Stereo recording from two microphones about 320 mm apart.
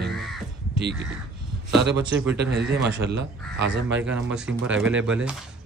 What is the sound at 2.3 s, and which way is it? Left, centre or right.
A man's voice, right.